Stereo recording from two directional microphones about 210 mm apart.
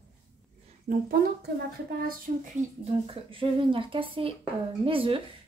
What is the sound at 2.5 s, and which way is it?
Speech, 25° right (ahead or behind).